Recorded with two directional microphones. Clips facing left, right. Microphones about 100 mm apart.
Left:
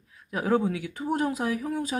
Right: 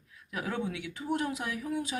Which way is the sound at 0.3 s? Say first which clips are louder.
Left 9 dB; 40° left (ahead or behind).